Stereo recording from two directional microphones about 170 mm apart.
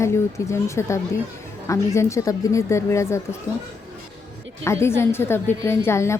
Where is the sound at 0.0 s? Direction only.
15° left (ahead or behind).